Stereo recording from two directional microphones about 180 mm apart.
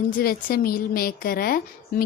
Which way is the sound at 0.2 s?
55° left (ahead or behind).